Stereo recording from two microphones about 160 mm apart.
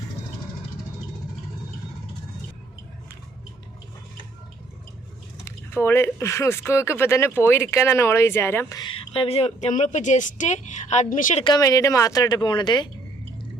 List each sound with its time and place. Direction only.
5.5 s speech: 15° left (ahead or behind)
8.8 s a woman's voice: 35° left (ahead or behind); by 11.4 s 55° left (ahead or behind)
11.4 s speech: 25° left (ahead or behind)